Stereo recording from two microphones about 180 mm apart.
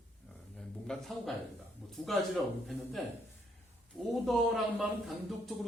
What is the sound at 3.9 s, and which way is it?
A man's voice, centre (ahead or behind).